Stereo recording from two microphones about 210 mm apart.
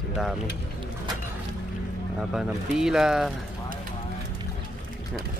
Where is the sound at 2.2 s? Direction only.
Centre (ahead or behind).